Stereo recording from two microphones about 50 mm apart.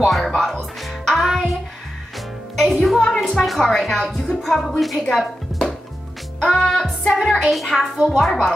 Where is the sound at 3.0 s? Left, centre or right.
Centre.